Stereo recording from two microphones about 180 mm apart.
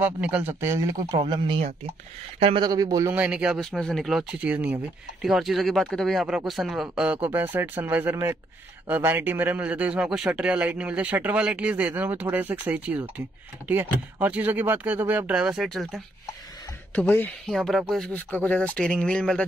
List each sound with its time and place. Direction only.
0.0 s speech: 10° right (ahead or behind)
1.2 s speech: 30° right (ahead or behind); by 19.4 s 5° left (ahead or behind)